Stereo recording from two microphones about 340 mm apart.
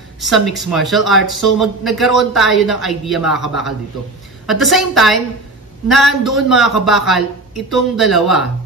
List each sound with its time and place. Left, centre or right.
0.2 s a man's voice: centre